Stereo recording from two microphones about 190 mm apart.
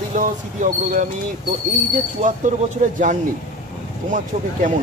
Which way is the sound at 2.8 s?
45° right (ahead or behind).